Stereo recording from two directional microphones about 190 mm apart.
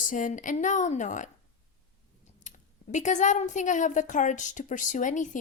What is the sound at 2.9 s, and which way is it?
Speech, 40° left (ahead or behind).